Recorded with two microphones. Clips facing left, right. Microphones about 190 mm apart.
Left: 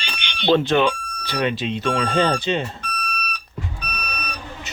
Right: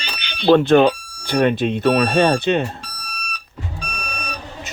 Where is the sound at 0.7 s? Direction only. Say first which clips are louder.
Right 6 dB; 50° right (ahead or behind).